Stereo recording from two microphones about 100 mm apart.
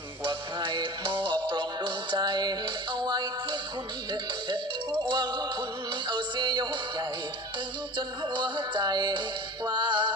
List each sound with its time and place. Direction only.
0.3 s music: 55° right (ahead or behind)
7.9 s music: 55° right (ahead or behind)